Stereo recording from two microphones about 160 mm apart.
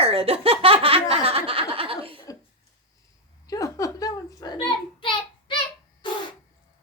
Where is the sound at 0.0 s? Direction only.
40° right (ahead or behind).